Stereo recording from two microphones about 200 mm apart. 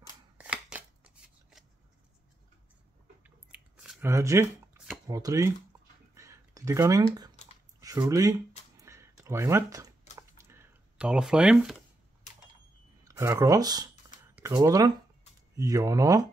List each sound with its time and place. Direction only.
0.4 s shuffling cards: 5° right (ahead or behind)
3.3 s chewing: 5° right (ahead or behind)
4.1 s speech: 15° right (ahead or behind)
6.1 s a sound: 15° right (ahead or behind)
13.0 s speech: 15° right (ahead or behind)